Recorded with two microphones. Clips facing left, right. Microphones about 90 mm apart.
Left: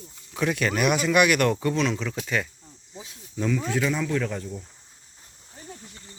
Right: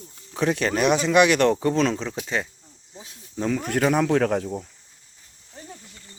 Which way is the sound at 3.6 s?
60° right (ahead or behind).